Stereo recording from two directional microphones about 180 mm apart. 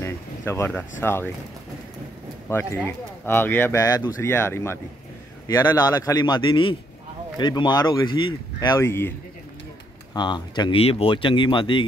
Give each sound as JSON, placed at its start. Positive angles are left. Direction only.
{"t": 0.0, "sound": "a sound", "side_deg": 15}
{"t": 1.0, "sound": "speech", "side_deg": 10}
{"t": 2.5, "sound": "speech", "side_deg": 10}
{"t": 10.1, "sound": "speech", "side_deg": 25}